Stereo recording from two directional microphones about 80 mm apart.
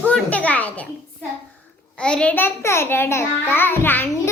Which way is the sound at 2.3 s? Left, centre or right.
Left.